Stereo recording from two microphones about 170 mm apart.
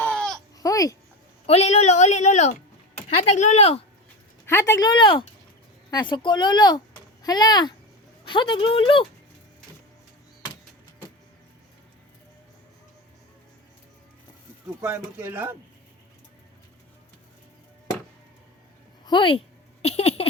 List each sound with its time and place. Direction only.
0.0 s a sound: 5° left (ahead or behind)
0.6 s babbling: 20° left (ahead or behind)
1.5 s speech: 40° left (ahead or behind)
4.4 s speech: 15° left (ahead or behind); by 9.0 s 30° left (ahead or behind)
14.8 s speech: 15° right (ahead or behind)
19.0 s speech: 30° left (ahead or behind)